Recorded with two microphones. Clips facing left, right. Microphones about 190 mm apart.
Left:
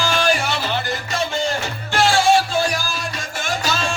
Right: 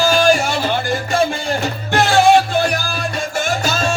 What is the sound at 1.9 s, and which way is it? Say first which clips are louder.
Music: right 3 dB; 60° right (ahead or behind).